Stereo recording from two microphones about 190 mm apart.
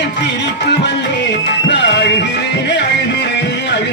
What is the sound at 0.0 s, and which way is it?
Music, 65° left (ahead or behind).